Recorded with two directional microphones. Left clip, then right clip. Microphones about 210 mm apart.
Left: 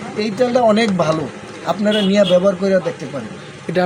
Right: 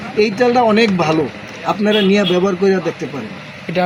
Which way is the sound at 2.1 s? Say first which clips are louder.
Left 2 dB; 20° left (ahead or behind).